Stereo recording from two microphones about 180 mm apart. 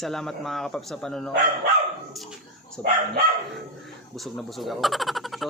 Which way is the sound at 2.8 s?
10° left (ahead or behind).